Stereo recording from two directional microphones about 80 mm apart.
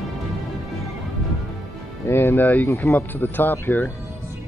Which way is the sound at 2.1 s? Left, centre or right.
Left.